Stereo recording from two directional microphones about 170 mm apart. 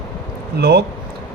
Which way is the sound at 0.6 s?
70° right (ahead or behind).